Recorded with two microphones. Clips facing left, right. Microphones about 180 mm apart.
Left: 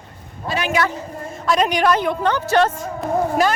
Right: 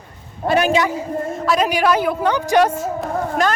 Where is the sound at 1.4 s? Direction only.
5° right (ahead or behind).